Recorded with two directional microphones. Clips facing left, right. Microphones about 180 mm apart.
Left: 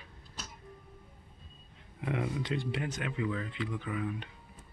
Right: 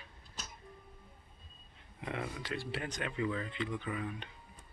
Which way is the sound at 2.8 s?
5° left (ahead or behind).